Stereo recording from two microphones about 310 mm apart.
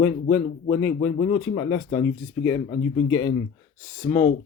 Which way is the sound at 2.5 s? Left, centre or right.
Left.